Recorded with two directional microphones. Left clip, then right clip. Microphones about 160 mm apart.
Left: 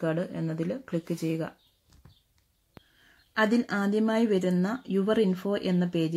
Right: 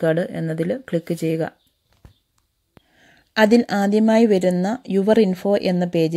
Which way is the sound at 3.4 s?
40° right (ahead or behind).